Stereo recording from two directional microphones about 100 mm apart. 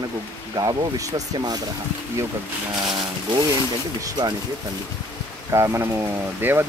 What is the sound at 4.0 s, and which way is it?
Speech, 45° right (ahead or behind).